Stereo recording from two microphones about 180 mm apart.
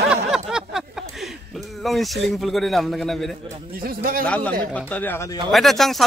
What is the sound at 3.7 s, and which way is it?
Speech, 55° right (ahead or behind).